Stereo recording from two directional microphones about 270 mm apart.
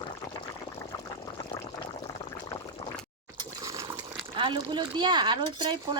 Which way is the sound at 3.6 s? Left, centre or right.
Centre.